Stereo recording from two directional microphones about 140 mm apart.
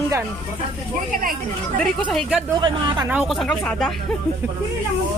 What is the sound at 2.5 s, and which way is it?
Speech, 30° right (ahead or behind).